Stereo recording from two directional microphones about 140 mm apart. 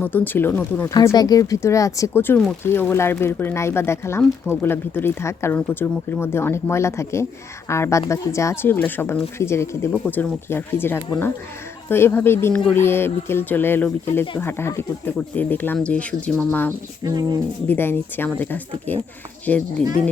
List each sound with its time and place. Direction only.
0.0 s speech: 15° left (ahead or behind)
0.9 s speech: 30° left (ahead or behind)
17.0 s speech: 30° right (ahead or behind)
17.7 s speech: 15° left (ahead or behind)